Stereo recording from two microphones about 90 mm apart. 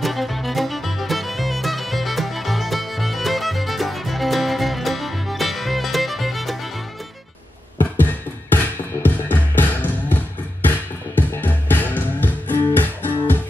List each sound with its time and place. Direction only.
0.0 s music: centre (ahead or behind)
7.8 s music: 20° left (ahead or behind)